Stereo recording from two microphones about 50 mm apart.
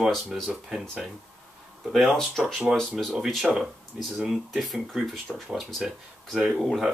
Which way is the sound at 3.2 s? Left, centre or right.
Centre.